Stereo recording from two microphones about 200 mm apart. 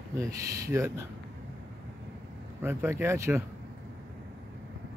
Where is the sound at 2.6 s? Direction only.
10° right (ahead or behind).